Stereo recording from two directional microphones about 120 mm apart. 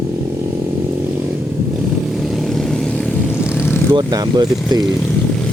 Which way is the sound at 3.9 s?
35° right (ahead or behind).